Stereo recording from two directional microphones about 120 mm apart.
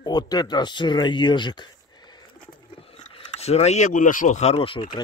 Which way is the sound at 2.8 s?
55° left (ahead or behind).